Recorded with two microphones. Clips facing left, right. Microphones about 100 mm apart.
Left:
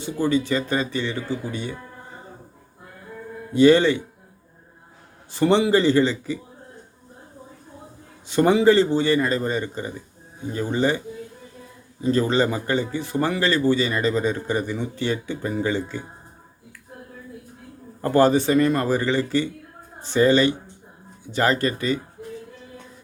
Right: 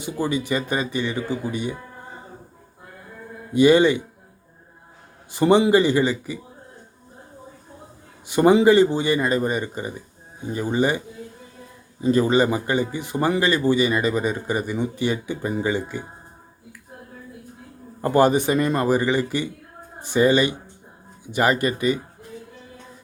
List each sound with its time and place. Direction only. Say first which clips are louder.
0.0 s speech: left 3 dB; 15° right (ahead or behind)
3.5 s speech: even; 15° right (ahead or behind)
5.3 s speech: right 2 dB; 15° right (ahead or behind)
8.3 s speech: right 2 dB; 15° right (ahead or behind)
12.0 s speech: right 2 dB; 15° right (ahead or behind)
18.0 s speech: even; 15° right (ahead or behind)